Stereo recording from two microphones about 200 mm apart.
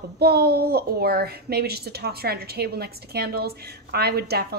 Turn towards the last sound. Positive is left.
turn(degrees=-50)  # may be behind; listen again after turning